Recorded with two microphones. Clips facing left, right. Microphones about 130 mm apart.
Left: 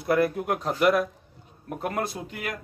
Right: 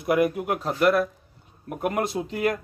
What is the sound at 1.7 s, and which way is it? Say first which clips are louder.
Speech: right 3 dB; 15° right (ahead or behind).